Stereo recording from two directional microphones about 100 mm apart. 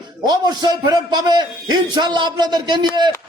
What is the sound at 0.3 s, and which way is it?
A man's voice, 45° right (ahead or behind).